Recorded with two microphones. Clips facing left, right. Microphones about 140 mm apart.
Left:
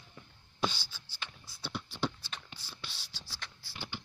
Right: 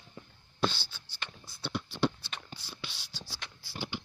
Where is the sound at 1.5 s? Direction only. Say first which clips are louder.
Right 5 dB; 5° left (ahead or behind).